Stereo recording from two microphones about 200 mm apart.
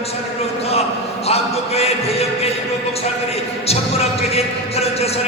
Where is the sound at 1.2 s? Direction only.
30° left (ahead or behind).